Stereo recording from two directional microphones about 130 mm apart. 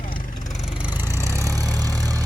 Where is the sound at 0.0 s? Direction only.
90° left.